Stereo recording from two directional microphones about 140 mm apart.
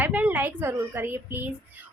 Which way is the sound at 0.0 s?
10° right (ahead or behind).